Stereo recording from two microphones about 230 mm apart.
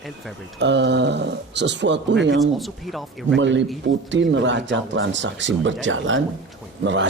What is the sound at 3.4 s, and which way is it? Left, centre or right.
Speech, right.